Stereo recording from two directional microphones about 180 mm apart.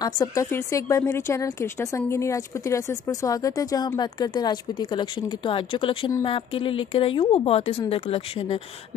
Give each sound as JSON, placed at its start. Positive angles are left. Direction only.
{"t": 0.0, "sound": "speech", "side_deg": 20}